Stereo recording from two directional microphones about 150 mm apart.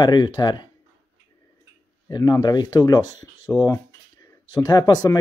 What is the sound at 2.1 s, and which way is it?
Speech, 25° left (ahead or behind).